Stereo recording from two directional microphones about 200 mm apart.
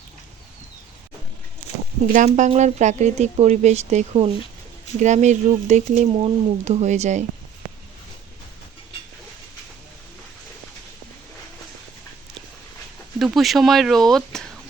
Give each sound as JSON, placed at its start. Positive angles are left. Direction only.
{"t": 2.1, "sound": "speech", "side_deg": -35}
{"t": 13.1, "sound": "speech", "side_deg": 0}